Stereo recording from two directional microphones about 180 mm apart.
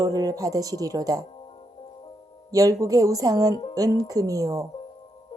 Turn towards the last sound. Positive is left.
turn(degrees=-20)  # may be behind; listen again after turning